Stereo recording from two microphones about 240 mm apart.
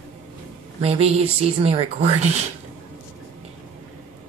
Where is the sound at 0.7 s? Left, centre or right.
Right.